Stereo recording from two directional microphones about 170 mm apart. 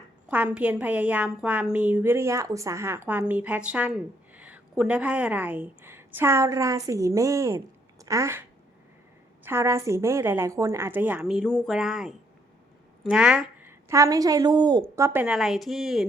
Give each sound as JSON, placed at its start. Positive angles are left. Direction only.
{"t": 0.3, "sound": "a woman's voice", "side_deg": -10}
{"t": 15.2, "sound": "speech", "side_deg": -5}